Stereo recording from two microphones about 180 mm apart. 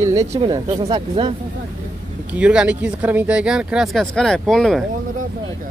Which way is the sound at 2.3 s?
5° right (ahead or behind).